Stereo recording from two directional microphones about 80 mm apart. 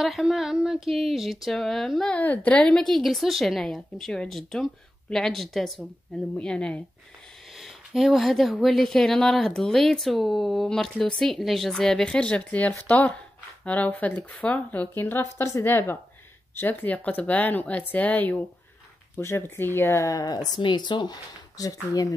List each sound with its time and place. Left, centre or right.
0.0 s speech: centre
2.0 s speech: centre
7.5 s speech: centre; by 21.2 s left
21.5 s speech: left